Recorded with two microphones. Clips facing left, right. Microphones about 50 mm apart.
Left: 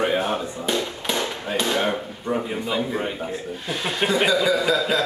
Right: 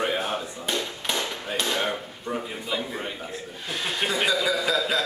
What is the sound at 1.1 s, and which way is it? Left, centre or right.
Hammer, centre.